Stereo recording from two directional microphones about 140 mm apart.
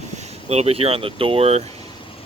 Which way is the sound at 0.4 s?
50° right (ahead or behind).